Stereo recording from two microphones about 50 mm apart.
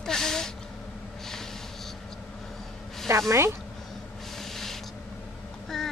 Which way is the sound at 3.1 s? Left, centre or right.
Right.